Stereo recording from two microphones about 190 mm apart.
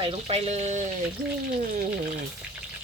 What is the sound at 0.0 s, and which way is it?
Speech, 30° right (ahead or behind).